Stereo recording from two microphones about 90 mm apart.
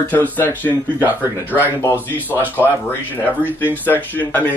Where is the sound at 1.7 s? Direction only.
25° left (ahead or behind).